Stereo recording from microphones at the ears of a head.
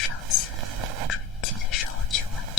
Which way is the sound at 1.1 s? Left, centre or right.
Left.